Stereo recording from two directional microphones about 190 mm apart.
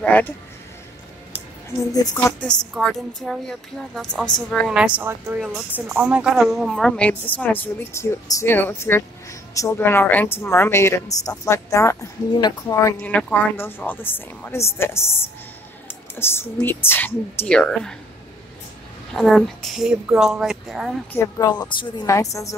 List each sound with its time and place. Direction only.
0.0 s speech: 5° left (ahead or behind)
1.8 s speech: 20° left (ahead or behind)
2.6 s a woman's voice: centre (ahead or behind); by 13.1 s 15° left (ahead or behind)
13.1 s speech: 5° left (ahead or behind)
19.1 s a woman's voice: centre (ahead or behind)
21.1 s speech: 15° left (ahead or behind)